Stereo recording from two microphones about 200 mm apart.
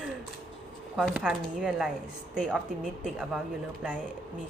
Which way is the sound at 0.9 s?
5° right (ahead or behind).